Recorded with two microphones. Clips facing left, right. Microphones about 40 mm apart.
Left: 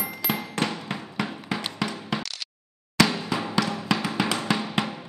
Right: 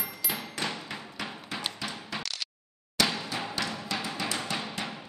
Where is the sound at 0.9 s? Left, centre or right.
Left.